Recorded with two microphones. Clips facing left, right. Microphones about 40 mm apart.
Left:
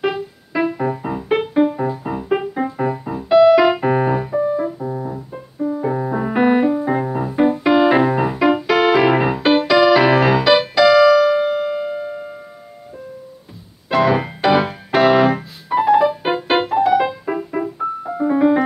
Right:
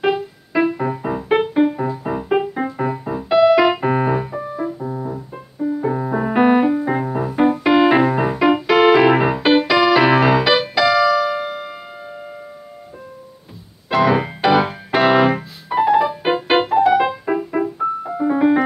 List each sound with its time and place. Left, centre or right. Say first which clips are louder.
0.0 s music: right 2 dB; centre
13.8 s keyboard: even; centre
17.6 s piano: right 2 dB; centre